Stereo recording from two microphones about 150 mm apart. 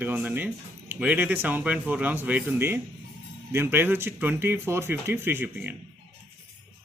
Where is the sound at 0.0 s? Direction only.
10° right (ahead or behind).